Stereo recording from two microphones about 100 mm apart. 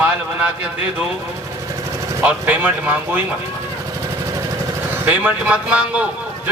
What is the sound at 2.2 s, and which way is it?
A man's voice, 20° right (ahead or behind).